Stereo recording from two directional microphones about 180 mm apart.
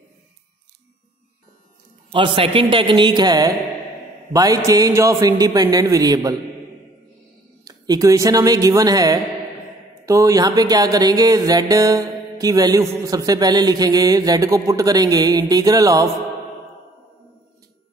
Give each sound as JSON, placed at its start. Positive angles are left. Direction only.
{"t": 2.0, "sound": "speech", "side_deg": -30}
{"t": 7.6, "sound": "speech", "side_deg": -20}